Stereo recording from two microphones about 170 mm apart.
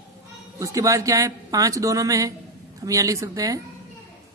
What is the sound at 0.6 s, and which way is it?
A woman's voice, 20° right (ahead or behind).